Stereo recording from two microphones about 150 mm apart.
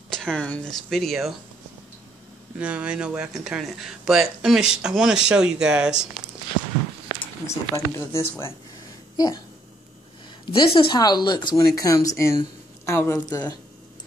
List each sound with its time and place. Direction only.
0.1 s speech: 5° left (ahead or behind)
2.6 s speech: 10° right (ahead or behind)
7.4 s speech: 20° left (ahead or behind)
10.5 s speech: 35° left (ahead or behind)